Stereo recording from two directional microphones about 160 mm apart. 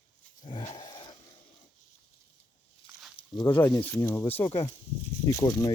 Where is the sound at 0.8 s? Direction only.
25° left (ahead or behind).